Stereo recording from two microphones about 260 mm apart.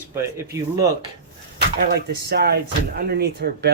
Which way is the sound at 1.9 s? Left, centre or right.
Right.